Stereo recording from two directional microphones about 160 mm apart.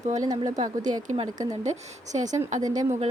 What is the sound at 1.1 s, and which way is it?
Speech, 50° right (ahead or behind).